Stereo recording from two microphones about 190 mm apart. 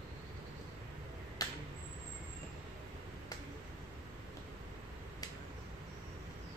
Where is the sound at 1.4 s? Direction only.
20° left (ahead or behind).